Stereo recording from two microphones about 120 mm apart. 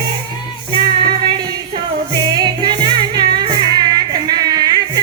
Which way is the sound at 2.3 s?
35° right (ahead or behind).